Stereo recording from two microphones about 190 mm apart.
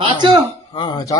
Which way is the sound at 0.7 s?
20° left (ahead or behind).